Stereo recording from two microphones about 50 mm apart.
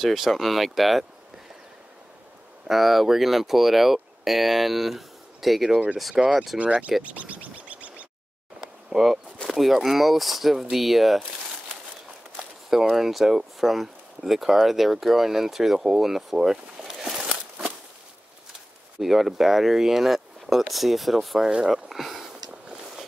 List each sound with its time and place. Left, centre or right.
0.0 s speech: centre
2.7 s speech: centre
6.6 s speech: right
8.5 s a sound: centre
9.4 s speech: centre
12.6 s speech: centre
18.9 s speech: centre
21.6 s a sound: centre